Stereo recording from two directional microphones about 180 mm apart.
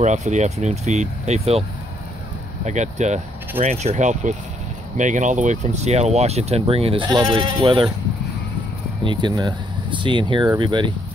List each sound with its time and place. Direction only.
0.0 s speech: 40° right (ahead or behind)
2.6 s speech: 40° right (ahead or behind)
9.0 s speech: 25° right (ahead or behind)